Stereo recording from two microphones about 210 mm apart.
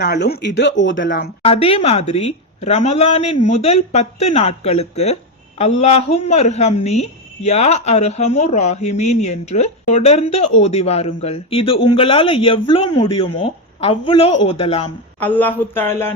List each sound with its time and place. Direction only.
0.0 s speech: 50° left (ahead or behind)
1.5 s a woman's voice: 30° left (ahead or behind)
15.2 s speech: 10° left (ahead or behind)